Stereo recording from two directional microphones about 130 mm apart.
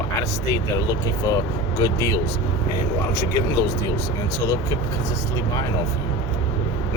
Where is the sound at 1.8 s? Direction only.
25° left (ahead or behind).